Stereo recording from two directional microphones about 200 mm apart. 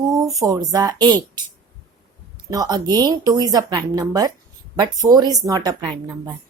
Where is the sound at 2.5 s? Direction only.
20° right (ahead or behind).